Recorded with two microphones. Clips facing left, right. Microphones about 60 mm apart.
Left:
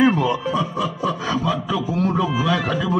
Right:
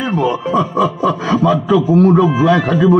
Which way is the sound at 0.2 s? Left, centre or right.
Right.